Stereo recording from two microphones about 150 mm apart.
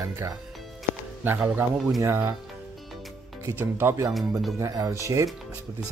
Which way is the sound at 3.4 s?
15° right (ahead or behind).